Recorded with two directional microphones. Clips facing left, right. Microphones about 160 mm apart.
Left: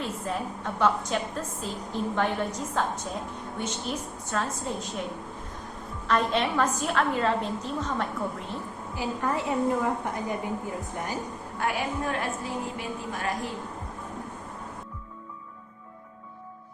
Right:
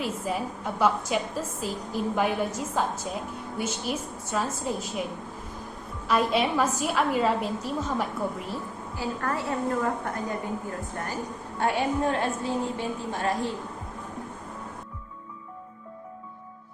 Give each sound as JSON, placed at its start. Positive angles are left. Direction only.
{"t": 0.0, "sound": "a woman's voice", "side_deg": -5}
{"t": 6.1, "sound": "a woman's voice", "side_deg": -5}
{"t": 9.0, "sound": "a woman's voice", "side_deg": 15}
{"t": 11.6, "sound": "a woman's voice", "side_deg": -30}